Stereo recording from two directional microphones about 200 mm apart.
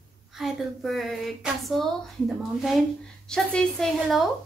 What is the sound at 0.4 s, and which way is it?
Speech, centre (ahead or behind).